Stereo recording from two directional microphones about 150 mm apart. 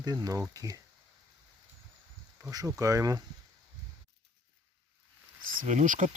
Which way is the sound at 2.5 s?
20° right (ahead or behind).